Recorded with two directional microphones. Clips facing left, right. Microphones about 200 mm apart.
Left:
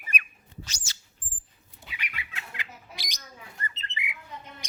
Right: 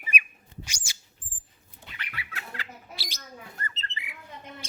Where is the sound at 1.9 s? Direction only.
15° left (ahead or behind).